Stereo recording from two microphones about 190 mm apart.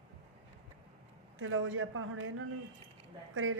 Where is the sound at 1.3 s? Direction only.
90° right.